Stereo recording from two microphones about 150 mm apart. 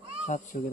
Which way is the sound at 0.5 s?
60° left (ahead or behind).